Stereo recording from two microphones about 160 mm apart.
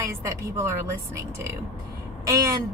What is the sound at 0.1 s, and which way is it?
Speech, 20° right (ahead or behind).